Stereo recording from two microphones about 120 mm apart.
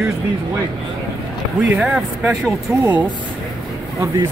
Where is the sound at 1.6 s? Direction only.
5° right (ahead or behind).